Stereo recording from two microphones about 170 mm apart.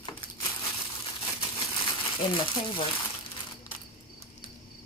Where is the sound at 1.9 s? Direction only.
30° left (ahead or behind).